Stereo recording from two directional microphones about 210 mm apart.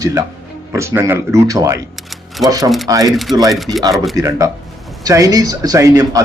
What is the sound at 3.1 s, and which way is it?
Speech, centre (ahead or behind).